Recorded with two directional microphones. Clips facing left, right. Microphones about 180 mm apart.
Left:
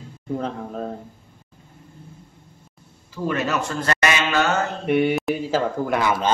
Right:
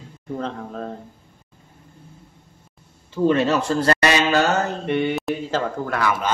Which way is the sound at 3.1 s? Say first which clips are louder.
Right 6 dB; 30° right (ahead or behind).